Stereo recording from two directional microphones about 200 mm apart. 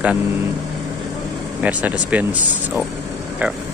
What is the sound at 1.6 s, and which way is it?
Speech, 5° right (ahead or behind).